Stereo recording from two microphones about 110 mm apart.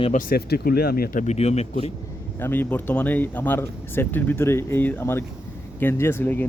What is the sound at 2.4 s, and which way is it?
A man's voice, 20° left (ahead or behind).